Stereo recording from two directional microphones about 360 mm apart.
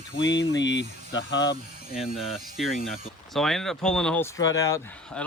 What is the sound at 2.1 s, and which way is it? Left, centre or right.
Speech, centre.